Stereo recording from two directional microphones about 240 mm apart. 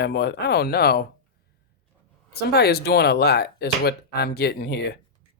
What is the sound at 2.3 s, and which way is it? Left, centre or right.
Speech, left.